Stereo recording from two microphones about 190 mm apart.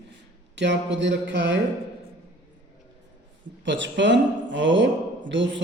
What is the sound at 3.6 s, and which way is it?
A woman's voice, 70° right (ahead or behind).